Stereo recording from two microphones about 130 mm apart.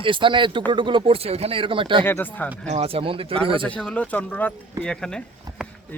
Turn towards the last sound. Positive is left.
turn(degrees=5)  # may be behind; listen again after turning